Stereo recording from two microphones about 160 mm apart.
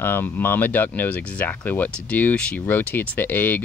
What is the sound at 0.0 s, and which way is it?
Speech, 15° left (ahead or behind).